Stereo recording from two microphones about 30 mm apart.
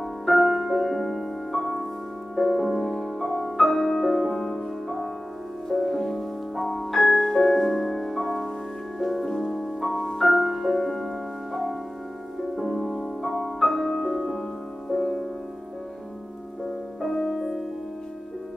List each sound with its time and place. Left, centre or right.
0.0 s music: centre
0.9 s music: centre
2.5 s music: centre
2.8 s music: centre
3.2 s music: centre
6.5 s music: centre
9.2 s music: centre
10.7 s music: centre
14.9 s music: centre
17.3 s music: centre